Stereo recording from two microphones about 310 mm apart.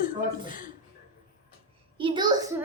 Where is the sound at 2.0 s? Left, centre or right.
Centre.